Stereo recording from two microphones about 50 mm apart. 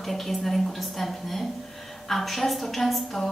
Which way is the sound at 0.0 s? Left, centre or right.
Centre.